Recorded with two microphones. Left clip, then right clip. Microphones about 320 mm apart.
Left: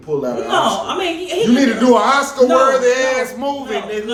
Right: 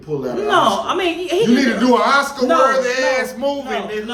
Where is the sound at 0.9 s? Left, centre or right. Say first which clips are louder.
Right 1 dB; centre.